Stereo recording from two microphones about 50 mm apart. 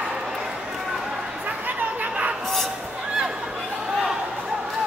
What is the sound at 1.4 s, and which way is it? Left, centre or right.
Chatter, right.